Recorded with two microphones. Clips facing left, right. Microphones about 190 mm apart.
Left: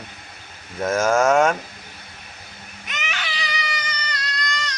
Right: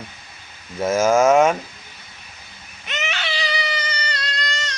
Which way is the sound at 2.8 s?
25° right (ahead or behind).